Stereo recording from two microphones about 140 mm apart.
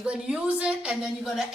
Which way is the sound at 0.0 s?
10° right (ahead or behind).